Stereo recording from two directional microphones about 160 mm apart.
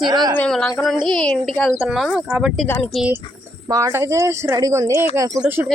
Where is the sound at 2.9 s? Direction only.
5° right (ahead or behind).